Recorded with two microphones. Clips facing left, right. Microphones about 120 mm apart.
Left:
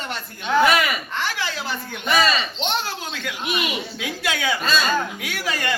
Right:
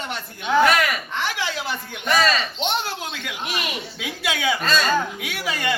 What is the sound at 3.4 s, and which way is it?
Speech, 10° left (ahead or behind).